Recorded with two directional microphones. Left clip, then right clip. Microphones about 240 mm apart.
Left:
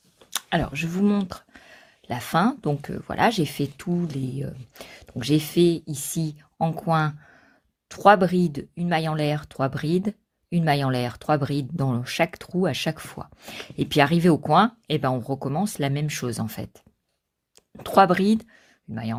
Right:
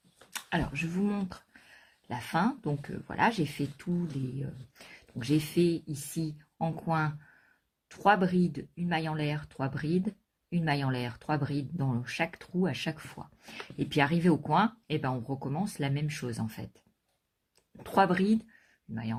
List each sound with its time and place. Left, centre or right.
0.3 s speech: left